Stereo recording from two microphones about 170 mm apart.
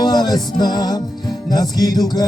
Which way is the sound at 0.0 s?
25° left (ahead or behind).